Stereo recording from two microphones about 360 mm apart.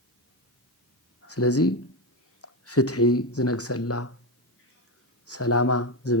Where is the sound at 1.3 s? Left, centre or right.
Left.